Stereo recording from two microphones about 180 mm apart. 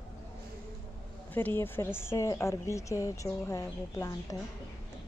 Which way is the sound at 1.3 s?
10° left (ahead or behind).